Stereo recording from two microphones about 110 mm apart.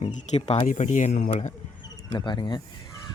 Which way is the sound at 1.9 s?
40° left (ahead or behind).